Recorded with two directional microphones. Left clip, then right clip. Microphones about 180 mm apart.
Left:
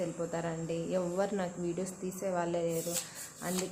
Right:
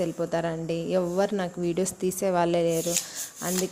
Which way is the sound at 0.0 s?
35° right (ahead or behind).